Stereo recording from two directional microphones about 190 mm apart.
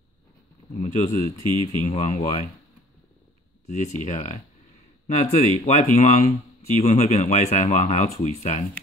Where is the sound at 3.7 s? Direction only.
40° left (ahead or behind).